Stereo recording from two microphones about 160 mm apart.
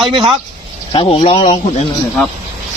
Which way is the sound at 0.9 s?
35° left (ahead or behind).